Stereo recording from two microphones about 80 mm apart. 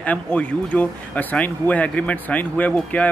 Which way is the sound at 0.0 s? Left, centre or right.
Centre.